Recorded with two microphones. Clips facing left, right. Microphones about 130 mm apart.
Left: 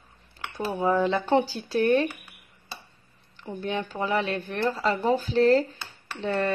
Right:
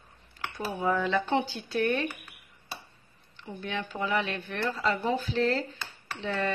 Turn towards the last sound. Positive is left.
turn(degrees=45)  # may be behind; listen again after turning